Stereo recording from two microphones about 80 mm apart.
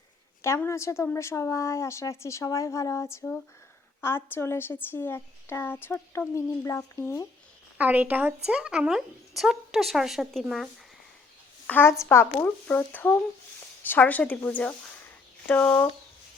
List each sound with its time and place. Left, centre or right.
0.4 s a woman's voice: left
7.8 s speech: right; by 10.7 s centre
11.6 s a woman's voice: left